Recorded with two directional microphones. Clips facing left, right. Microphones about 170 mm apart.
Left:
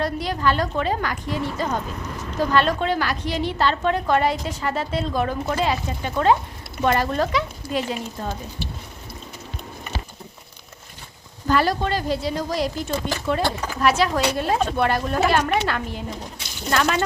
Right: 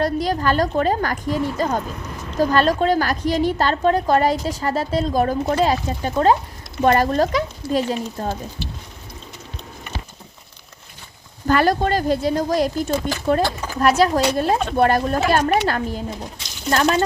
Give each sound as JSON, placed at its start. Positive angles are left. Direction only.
{"t": 0.0, "sound": "a woman's voice", "side_deg": -40}
{"t": 11.4, "sound": "a woman's voice", "side_deg": -50}